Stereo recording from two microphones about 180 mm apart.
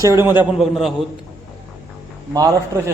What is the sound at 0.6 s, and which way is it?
Speech, centre (ahead or behind).